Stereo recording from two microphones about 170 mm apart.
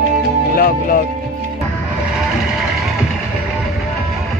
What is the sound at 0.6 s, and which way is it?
Speech, 55° left (ahead or behind).